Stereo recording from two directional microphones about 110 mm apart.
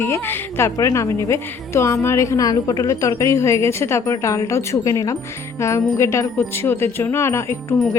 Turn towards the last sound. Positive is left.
turn(degrees=25)  # may be behind; listen again after turning